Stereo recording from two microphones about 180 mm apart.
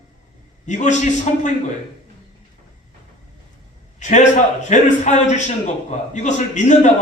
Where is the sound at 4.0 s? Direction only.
40° left (ahead or behind).